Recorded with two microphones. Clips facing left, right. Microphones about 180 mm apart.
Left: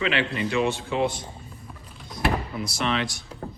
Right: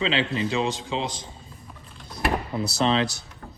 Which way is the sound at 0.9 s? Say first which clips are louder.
Left 4 dB; 90° right.